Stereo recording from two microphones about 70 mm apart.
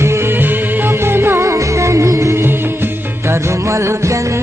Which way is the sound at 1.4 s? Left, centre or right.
Right.